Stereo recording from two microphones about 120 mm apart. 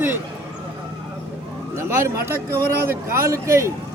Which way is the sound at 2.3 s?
25° right (ahead or behind).